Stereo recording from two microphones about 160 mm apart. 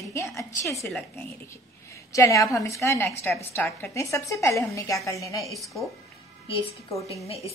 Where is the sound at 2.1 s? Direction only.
20° left (ahead or behind).